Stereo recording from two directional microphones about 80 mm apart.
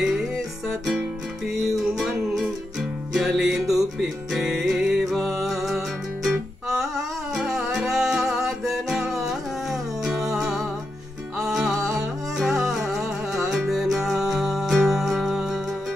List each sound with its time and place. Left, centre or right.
0.0 s music: centre
7.3 s music: centre